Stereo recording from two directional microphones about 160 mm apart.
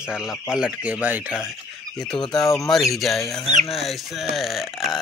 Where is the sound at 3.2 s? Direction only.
20° left (ahead or behind).